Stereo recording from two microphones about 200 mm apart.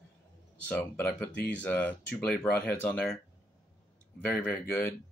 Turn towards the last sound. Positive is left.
turn(degrees=10)  # may be behind; listen again after turning